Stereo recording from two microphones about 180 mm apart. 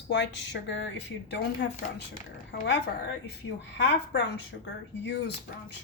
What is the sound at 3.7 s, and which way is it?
A woman's voice, 75° left (ahead or behind).